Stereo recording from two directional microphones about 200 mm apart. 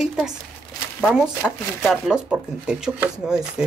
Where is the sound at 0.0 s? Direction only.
5° right (ahead or behind).